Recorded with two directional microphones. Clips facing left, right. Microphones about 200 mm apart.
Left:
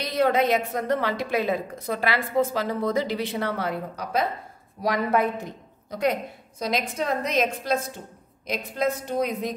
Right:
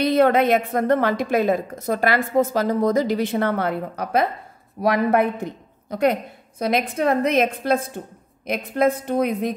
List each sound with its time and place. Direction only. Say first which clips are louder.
0.0 s a woman's voice: right 5 dB; 55° right (ahead or behind)